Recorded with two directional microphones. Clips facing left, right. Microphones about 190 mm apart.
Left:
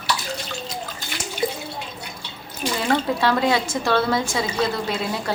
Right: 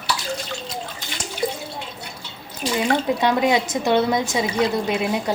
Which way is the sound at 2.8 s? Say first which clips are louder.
Right 1 dB; 15° right (ahead or behind).